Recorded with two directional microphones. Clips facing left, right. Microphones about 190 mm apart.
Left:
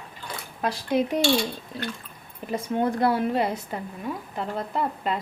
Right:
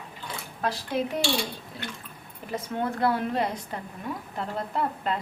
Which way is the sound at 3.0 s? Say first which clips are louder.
Even; 10° left (ahead or behind).